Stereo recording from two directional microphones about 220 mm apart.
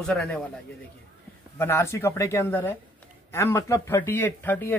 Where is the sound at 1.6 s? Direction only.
10° left (ahead or behind).